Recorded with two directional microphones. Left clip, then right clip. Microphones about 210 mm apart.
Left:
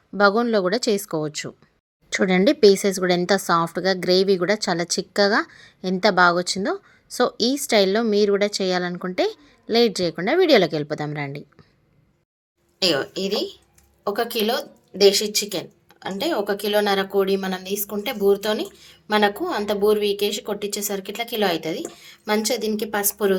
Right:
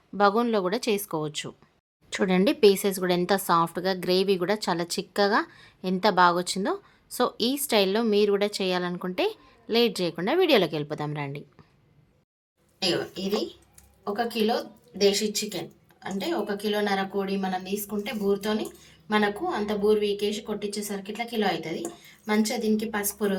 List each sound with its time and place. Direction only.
0.2 s speech: 15° left (ahead or behind)
12.8 s speech: 55° left (ahead or behind)